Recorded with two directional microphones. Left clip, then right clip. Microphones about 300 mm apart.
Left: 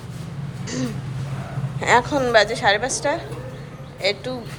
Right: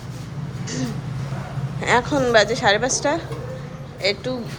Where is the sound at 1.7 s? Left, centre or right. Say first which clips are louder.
Left 1 dB; centre.